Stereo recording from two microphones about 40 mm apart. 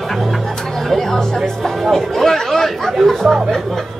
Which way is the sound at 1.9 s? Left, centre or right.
Centre.